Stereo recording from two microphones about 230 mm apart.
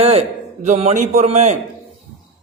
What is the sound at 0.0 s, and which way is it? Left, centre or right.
A man's voice, right.